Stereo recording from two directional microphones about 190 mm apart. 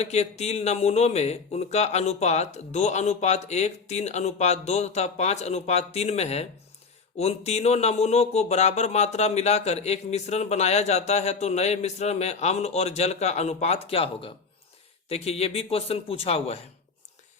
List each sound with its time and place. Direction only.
0.0 s speech: 35° left (ahead or behind)